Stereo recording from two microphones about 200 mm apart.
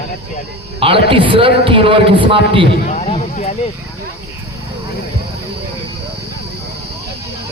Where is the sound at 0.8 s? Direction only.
25° right (ahead or behind).